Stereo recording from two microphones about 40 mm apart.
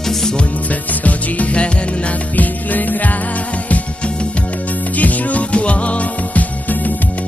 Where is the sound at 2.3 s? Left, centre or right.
Left.